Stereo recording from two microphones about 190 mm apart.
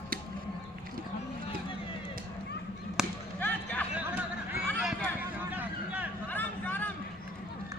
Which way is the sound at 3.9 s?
10° right (ahead or behind).